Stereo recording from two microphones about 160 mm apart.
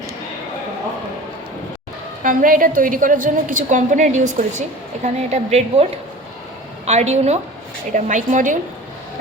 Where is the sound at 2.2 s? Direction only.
60° right (ahead or behind).